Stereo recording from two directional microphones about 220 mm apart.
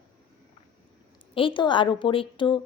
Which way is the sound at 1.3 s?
25° left (ahead or behind).